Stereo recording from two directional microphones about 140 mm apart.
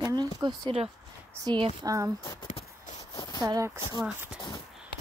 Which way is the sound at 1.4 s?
15° right (ahead or behind).